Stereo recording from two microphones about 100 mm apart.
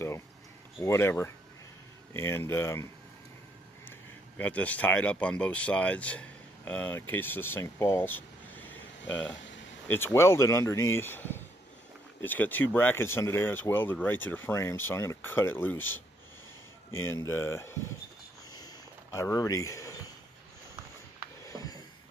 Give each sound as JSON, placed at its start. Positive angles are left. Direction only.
{"t": 0.7, "sound": "speech", "side_deg": 25}
{"t": 4.4, "sound": "speech", "side_deg": 15}
{"t": 7.6, "sound": "air conditioning", "side_deg": 25}
{"t": 9.9, "sound": "speech", "side_deg": 25}
{"t": 19.1, "sound": "speech", "side_deg": 35}
{"t": 21.5, "sound": "a sound", "side_deg": 40}